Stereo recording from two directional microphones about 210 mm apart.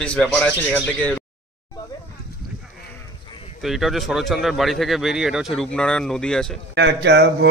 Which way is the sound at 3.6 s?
Centre (ahead or behind).